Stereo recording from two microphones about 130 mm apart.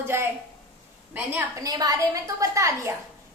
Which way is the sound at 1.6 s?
30° right (ahead or behind).